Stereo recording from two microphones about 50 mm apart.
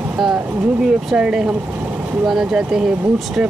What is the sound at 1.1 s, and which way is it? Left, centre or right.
Speech, centre.